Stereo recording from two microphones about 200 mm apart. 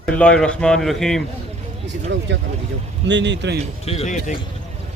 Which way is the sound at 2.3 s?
60° right (ahead or behind).